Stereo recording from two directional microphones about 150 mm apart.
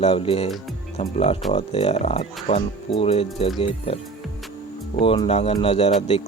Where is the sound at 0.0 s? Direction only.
40° left (ahead or behind).